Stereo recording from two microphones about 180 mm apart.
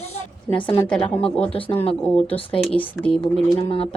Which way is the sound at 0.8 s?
5° left (ahead or behind).